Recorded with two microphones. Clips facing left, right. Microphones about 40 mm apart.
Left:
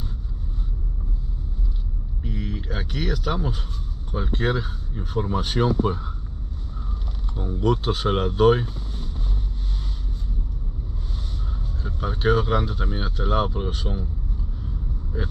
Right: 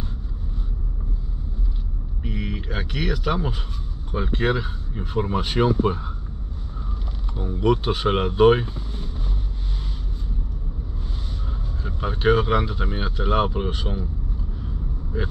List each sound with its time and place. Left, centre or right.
2.2 s vehicle: right
2.7 s speech: right
7.5 s speech: right
11.8 s speech: right